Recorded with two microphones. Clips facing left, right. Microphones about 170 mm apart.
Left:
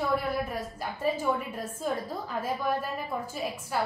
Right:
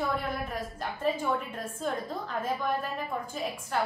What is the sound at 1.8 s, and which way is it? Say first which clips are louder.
Speech: left 1 dB; 5° left (ahead or behind).